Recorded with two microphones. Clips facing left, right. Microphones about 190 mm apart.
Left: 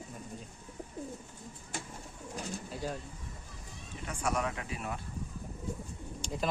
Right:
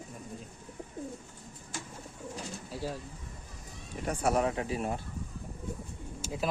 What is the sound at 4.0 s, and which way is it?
Speech, 35° right (ahead or behind).